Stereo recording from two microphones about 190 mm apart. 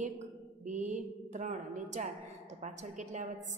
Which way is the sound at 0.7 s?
40° right (ahead or behind).